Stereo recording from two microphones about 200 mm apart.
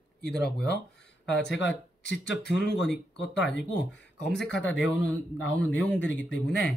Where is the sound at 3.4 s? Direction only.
Centre (ahead or behind).